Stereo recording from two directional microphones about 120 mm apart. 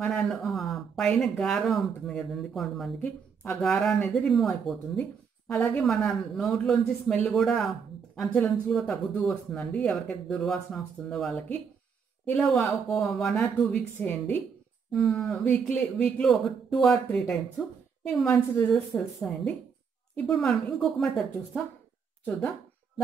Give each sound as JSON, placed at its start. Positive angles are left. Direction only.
{"t": 0.0, "sound": "speech", "side_deg": 5}
{"t": 13.9, "sound": "a woman's voice", "side_deg": 15}
{"t": 14.9, "sound": "speech", "side_deg": 0}